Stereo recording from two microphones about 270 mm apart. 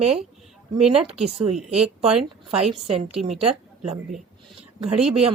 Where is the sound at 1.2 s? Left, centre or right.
Right.